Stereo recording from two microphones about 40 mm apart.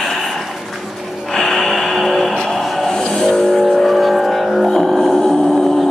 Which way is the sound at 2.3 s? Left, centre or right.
Centre.